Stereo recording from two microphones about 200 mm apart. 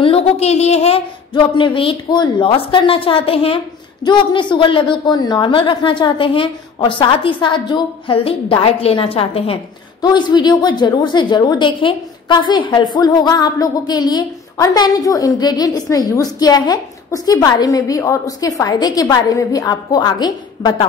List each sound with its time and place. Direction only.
0.0 s a woman's voice: 30° left (ahead or behind)